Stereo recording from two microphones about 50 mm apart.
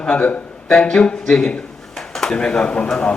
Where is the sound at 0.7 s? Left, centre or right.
Centre.